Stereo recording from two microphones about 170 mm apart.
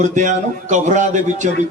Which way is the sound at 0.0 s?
45° right (ahead or behind).